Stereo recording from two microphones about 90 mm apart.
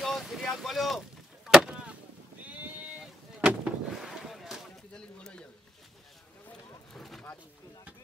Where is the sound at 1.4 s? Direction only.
10° right (ahead or behind).